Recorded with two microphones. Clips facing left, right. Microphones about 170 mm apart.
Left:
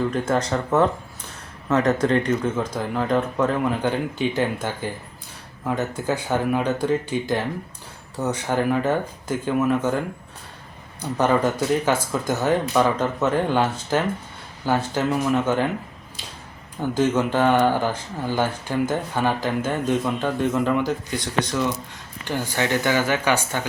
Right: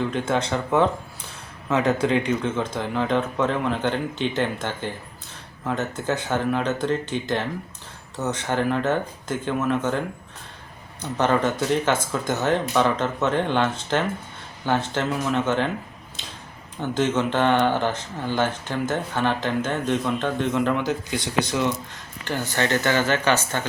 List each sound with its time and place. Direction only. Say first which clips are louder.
0.1 s speech: left 2 dB; centre (ahead or behind)
1.9 s speech: even; 5° right (ahead or behind)
11.0 s speech: left 1 dB; 10° left (ahead or behind)
16.8 s speech: left 2 dB; 10° left (ahead or behind)
21.4 s speech: even; 10° right (ahead or behind)
22.2 s speech: even; 15° left (ahead or behind)